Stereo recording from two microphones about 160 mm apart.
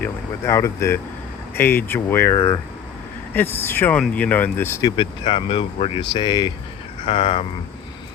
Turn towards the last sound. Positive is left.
turn(degrees=40)  # may be behind; listen again after turning